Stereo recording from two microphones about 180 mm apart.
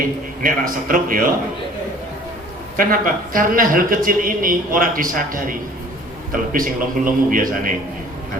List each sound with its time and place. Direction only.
0.4 s a man's voice: 50° right (ahead or behind)
2.7 s a man's voice: 50° right (ahead or behind)